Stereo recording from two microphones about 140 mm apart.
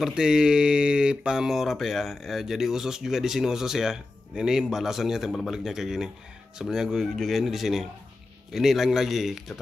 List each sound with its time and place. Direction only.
0.0 s speech: 5° right (ahead or behind)